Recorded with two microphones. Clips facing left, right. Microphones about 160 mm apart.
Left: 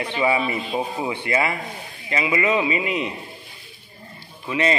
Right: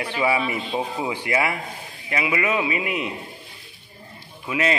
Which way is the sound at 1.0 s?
10° right (ahead or behind).